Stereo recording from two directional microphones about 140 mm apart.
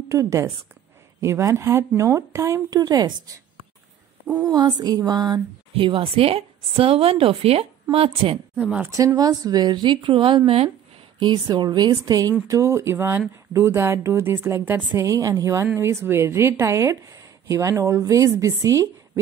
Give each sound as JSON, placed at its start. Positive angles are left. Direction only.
{"t": 0.1, "sound": "a woman's voice", "side_deg": -20}
{"t": 4.4, "sound": "a woman's voice", "side_deg": -30}
{"t": 8.5, "sound": "speech", "side_deg": -10}
{"t": 8.9, "sound": "a woman's voice", "side_deg": -25}
{"t": 11.1, "sound": "a woman's voice", "side_deg": -30}